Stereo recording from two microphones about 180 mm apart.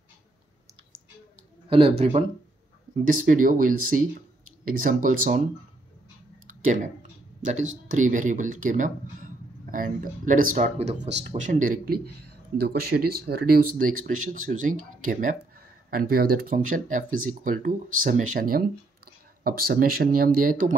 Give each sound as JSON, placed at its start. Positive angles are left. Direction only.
{"t": 1.7, "sound": "speech", "side_deg": -30}
{"t": 3.1, "sound": "speech", "side_deg": -50}
{"t": 6.6, "sound": "speech", "side_deg": -45}
{"t": 7.9, "sound": "speech", "side_deg": -45}
{"t": 11.0, "sound": "speech", "side_deg": -75}
{"t": 11.2, "sound": "speech", "side_deg": -45}